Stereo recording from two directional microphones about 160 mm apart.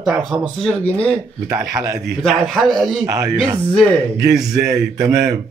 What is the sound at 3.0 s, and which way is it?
Speech, 20° right (ahead or behind).